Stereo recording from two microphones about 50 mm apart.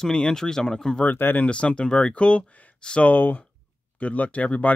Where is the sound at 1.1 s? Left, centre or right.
Left.